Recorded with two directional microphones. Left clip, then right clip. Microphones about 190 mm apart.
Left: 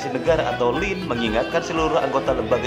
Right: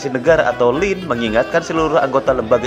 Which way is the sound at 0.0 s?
25° right (ahead or behind).